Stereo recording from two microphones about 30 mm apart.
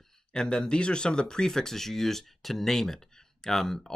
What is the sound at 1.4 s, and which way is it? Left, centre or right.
Speech, centre.